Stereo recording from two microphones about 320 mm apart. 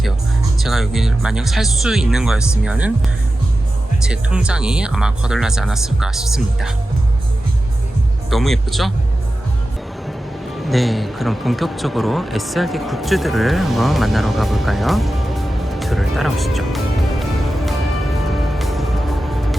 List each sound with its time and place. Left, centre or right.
0.6 s speech: centre
4.0 s speech: centre
8.3 s speech: centre
10.6 s speech: centre
18.3 s music: centre